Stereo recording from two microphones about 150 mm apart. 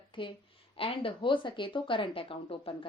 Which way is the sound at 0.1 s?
35° left (ahead or behind).